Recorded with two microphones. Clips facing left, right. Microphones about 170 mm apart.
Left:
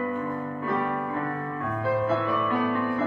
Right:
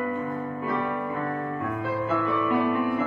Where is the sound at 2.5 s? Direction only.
15° right (ahead or behind).